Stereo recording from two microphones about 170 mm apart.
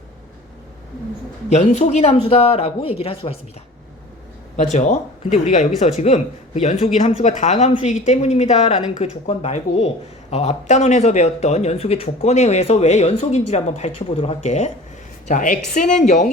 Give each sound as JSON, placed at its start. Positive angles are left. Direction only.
{"t": 1.5, "sound": "speech", "side_deg": 40}
{"t": 4.5, "sound": "speech", "side_deg": 45}